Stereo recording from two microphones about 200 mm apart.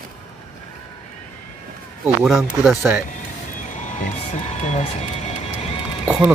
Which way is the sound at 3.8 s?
35° left (ahead or behind).